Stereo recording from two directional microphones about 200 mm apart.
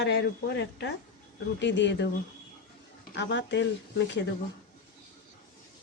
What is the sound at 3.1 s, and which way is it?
Speech, 65° left (ahead or behind).